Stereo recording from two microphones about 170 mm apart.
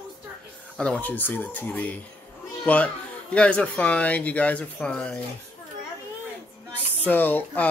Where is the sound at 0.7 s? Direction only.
5° left (ahead or behind).